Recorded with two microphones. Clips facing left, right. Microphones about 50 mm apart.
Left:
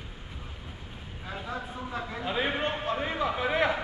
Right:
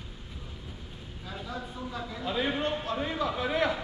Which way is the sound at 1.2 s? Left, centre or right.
Left.